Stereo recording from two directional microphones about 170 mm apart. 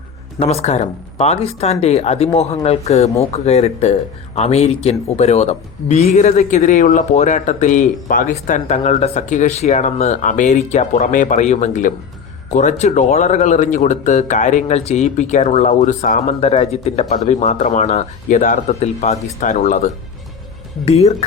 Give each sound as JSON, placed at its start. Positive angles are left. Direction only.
{"t": 0.3, "sound": "speech", "side_deg": 40}